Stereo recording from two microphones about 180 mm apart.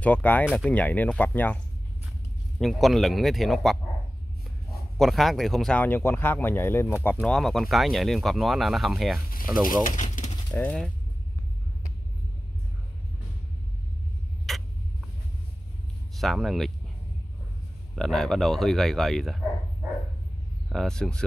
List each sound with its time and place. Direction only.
0.0 s speech: 10° left (ahead or behind)
2.6 s speech: centre (ahead or behind)
9.3 s speech: 50° left (ahead or behind)
10.5 s speech: 5° left (ahead or behind)
14.5 s a sound: centre (ahead or behind)
16.2 s speech: centre (ahead or behind)
17.9 s speech: centre (ahead or behind)
20.7 s speech: 5° left (ahead or behind)